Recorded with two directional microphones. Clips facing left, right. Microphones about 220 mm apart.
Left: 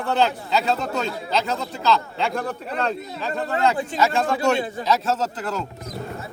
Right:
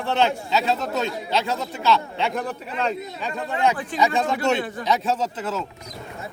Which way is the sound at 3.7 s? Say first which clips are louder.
Left 3 dB; 25° left (ahead or behind).